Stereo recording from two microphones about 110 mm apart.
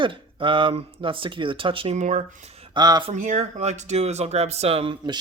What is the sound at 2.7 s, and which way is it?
Speech, 40° right (ahead or behind).